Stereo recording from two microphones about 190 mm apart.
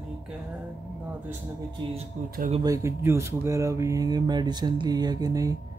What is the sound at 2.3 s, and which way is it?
Speech, 40° right (ahead or behind).